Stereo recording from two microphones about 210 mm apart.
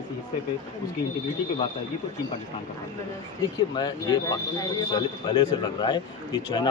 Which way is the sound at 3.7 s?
20° left (ahead or behind).